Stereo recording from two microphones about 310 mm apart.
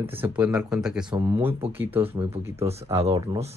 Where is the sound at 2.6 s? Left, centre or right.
Centre.